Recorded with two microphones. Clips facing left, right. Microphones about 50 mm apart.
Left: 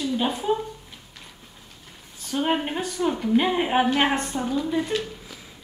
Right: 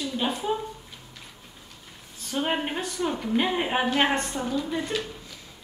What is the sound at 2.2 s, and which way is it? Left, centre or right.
A woman's voice, centre.